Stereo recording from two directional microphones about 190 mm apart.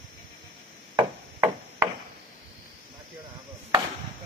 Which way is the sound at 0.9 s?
15° right (ahead or behind).